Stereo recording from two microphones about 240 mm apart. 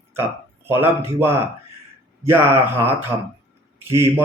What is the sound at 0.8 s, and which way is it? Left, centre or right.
Speech, centre.